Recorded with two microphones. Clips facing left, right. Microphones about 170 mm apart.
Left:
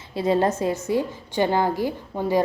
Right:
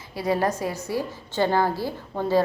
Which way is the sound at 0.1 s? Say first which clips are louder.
Left 3 dB; 25° left (ahead or behind).